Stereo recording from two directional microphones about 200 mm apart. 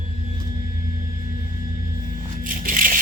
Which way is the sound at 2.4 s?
45° right (ahead or behind).